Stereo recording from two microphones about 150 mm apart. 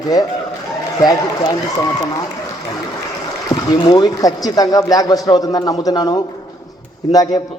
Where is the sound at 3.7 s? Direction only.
30° left (ahead or behind).